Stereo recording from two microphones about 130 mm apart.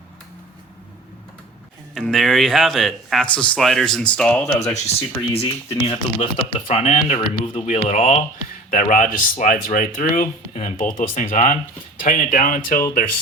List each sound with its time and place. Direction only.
2.0 s speech: centre (ahead or behind)
4.7 s speech: 50° left (ahead or behind)
8.7 s speech: 80° left